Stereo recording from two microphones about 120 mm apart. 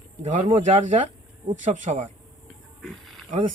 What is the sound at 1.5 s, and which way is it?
Speech, 90° right.